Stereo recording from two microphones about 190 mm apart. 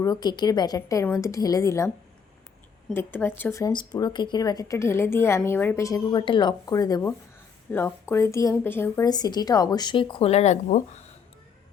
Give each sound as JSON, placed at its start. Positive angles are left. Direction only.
{"t": 0.0, "sound": "speech", "side_deg": 20}
{"t": 2.9, "sound": "a woman's voice", "side_deg": 10}